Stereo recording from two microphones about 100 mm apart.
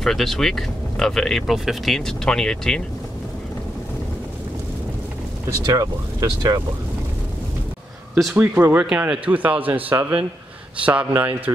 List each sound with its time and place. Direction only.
0.0 s speech: 5° left (ahead or behind)
5.7 s speech: 40° right (ahead or behind)
8.4 s speech: 20° right (ahead or behind)